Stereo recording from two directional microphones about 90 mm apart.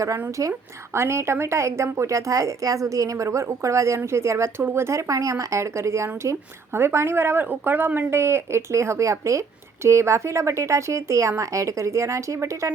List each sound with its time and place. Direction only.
0.0 s a woman's voice: 40° right (ahead or behind)